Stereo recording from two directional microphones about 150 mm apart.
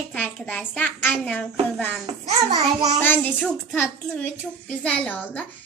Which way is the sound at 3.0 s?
10° left (ahead or behind).